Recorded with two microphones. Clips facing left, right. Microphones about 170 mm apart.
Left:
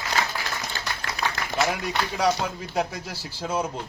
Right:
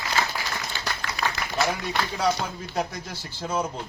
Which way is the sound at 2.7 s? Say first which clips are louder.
Left 2 dB; 10° left (ahead or behind).